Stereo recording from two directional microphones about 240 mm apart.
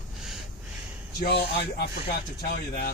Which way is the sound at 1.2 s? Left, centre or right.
Left.